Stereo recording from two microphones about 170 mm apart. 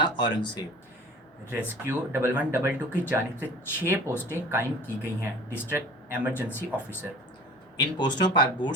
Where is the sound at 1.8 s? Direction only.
15° right (ahead or behind).